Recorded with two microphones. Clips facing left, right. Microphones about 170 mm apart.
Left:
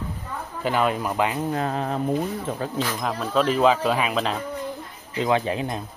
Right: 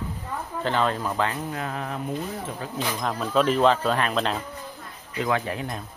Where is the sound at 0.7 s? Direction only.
10° left (ahead or behind).